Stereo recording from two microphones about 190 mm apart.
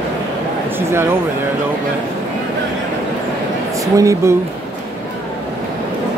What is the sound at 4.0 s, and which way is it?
Speech, 15° right (ahead or behind).